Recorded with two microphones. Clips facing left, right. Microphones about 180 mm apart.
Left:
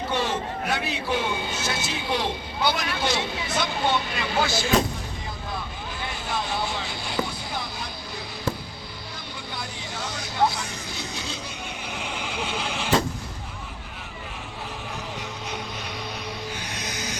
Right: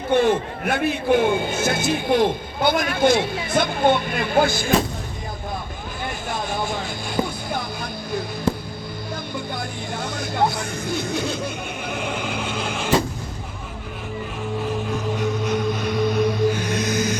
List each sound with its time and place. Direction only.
0.1 s a man's voice: 55° right (ahead or behind)
6.1 s vehicle: 50° right (ahead or behind)
9.3 s music: 50° right (ahead or behind)
15.2 s music: 50° right (ahead or behind)